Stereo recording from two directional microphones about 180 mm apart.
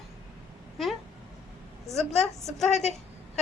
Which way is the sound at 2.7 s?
40° left (ahead or behind).